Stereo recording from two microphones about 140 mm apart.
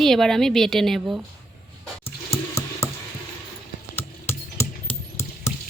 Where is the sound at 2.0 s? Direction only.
20° left (ahead or behind).